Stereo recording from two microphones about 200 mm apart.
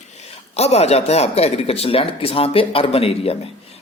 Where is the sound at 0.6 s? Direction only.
30° left (ahead or behind).